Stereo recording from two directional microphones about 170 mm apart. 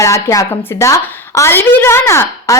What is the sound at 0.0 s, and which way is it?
A woman's voice, 20° left (ahead or behind).